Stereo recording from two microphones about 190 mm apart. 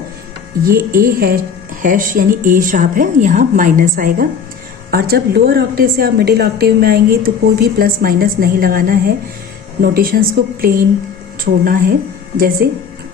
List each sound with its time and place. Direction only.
0.6 s a woman's voice: 50° right (ahead or behind)